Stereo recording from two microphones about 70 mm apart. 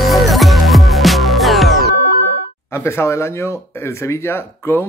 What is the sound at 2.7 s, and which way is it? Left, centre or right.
Speech, left.